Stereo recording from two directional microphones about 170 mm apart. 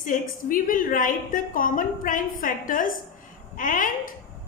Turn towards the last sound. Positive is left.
turn(degrees=50)  # may be behind; listen again after turning